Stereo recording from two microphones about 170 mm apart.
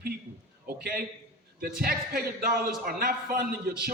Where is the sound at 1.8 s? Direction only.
60° right (ahead or behind).